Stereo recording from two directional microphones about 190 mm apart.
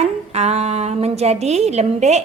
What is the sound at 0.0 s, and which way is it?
A woman's voice, 35° right (ahead or behind).